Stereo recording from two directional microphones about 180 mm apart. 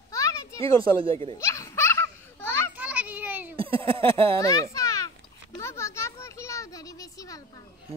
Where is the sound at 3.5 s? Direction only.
30° right (ahead or behind).